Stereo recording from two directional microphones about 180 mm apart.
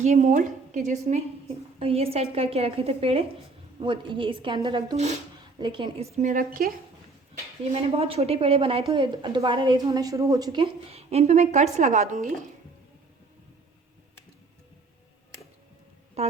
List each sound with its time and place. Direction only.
0.0 s a woman's voice: 40° right (ahead or behind)
6.3 s a woman's voice: 50° right (ahead or behind)
7.6 s a woman's voice: 35° right (ahead or behind)
16.2 s speech: 35° right (ahead or behind)